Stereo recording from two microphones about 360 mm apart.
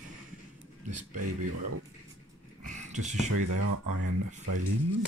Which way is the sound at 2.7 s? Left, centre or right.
Centre.